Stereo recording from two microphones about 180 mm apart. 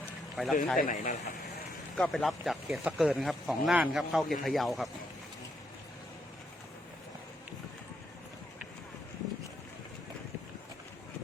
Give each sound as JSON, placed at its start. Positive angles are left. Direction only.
{"t": 0.4, "sound": "speech", "side_deg": 0}
{"t": 0.8, "sound": "speech", "side_deg": 45}
{"t": 2.0, "sound": "speech", "side_deg": 0}